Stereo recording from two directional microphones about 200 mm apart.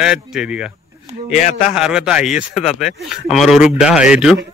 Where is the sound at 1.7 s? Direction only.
5° right (ahead or behind).